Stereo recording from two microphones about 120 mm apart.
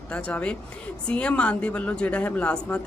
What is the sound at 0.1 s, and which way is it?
A woman's voice, 10° left (ahead or behind).